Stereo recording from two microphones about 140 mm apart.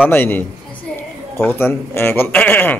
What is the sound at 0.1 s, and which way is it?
A man's voice, 15° left (ahead or behind).